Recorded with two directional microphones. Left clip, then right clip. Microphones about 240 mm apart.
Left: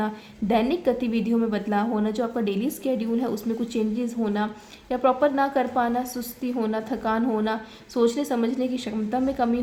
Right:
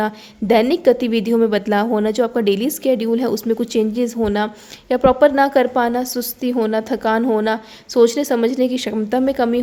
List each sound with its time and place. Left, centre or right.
0.0 s a woman's voice: right